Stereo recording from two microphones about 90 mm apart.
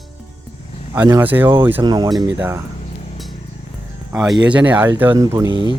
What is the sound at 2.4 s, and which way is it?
Speech, 25° right (ahead or behind).